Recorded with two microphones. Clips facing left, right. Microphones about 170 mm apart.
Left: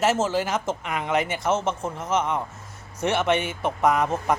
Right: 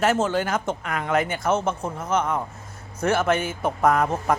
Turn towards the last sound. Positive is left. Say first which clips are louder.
# right 1 dB
turn(degrees=0)  # may be behind; listen again after turning